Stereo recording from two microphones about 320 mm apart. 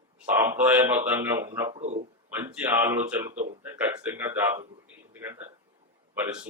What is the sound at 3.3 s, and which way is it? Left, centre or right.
Speech, right.